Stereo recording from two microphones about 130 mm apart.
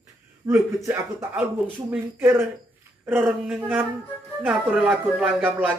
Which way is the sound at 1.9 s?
15° right (ahead or behind).